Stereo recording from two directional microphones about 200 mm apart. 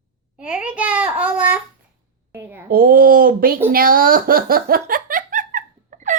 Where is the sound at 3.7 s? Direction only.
45° right (ahead or behind).